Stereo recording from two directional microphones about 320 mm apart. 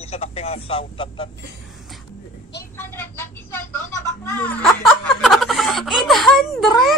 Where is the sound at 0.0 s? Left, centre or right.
Centre.